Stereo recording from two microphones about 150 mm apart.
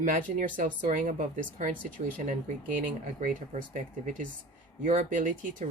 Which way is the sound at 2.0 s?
50° right (ahead or behind).